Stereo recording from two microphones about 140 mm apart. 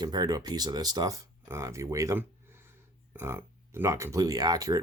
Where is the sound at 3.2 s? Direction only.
20° right (ahead or behind).